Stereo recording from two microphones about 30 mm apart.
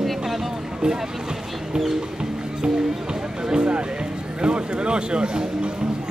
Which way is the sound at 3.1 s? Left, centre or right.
Right.